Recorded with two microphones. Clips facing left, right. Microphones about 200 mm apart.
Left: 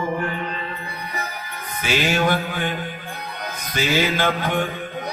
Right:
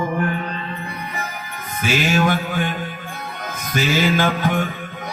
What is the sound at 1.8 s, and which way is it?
Music, 45° right (ahead or behind).